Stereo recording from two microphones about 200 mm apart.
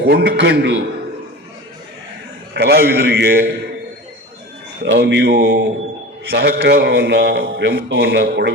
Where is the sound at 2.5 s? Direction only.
50° right (ahead or behind).